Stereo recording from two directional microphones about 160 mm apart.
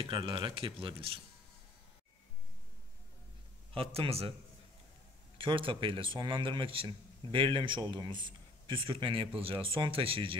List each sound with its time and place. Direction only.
0.0 s speech: 35° right (ahead or behind)
3.7 s speech: 35° right (ahead or behind)
5.4 s speech: 35° right (ahead or behind)